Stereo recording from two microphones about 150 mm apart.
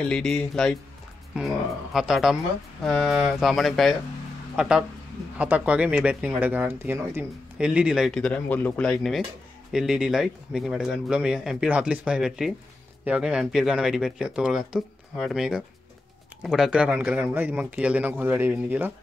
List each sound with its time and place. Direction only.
0.1 s speech: 5° left (ahead or behind)
2.0 s speech: centre (ahead or behind)